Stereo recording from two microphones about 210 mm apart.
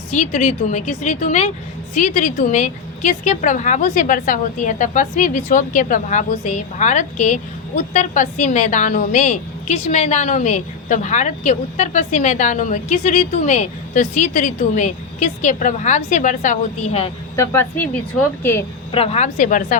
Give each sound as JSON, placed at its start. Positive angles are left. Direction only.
{"t": 0.1, "sound": "a woman's voice", "side_deg": 35}
{"t": 17.3, "sound": "speech", "side_deg": 10}
{"t": 18.9, "sound": "a woman's voice", "side_deg": 25}